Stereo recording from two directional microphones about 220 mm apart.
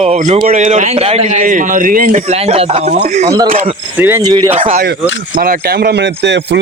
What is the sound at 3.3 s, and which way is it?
Speech, 20° right (ahead or behind).